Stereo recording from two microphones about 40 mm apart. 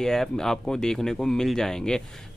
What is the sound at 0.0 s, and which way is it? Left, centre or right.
Speech, centre.